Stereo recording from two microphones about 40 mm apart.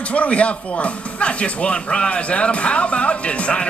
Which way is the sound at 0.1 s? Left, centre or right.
Left.